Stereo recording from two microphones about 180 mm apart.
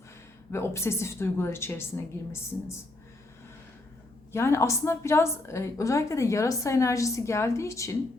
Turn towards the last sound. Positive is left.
turn(degrees=15)  # may be behind; listen again after turning